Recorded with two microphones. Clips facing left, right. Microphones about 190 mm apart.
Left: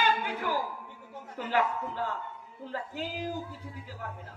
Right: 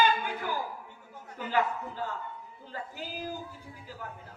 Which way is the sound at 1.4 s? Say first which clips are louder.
Left 1 dB; 70° left (ahead or behind).